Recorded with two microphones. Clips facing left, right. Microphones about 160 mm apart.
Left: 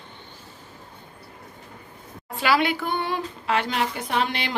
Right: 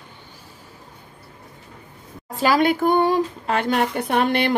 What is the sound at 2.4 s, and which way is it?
Speech, 45° right (ahead or behind).